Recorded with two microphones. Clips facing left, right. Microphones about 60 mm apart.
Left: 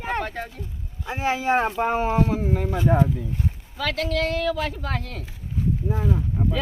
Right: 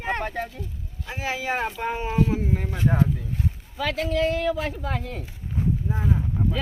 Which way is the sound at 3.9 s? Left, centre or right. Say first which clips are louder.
Right 2 dB; left.